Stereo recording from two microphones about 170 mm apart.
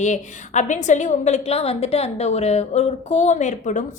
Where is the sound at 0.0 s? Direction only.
45° left (ahead or behind).